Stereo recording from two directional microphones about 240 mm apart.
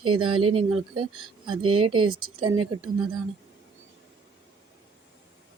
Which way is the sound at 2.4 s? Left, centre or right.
Right.